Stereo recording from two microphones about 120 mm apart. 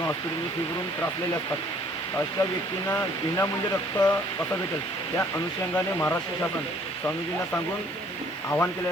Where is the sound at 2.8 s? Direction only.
25° left (ahead or behind).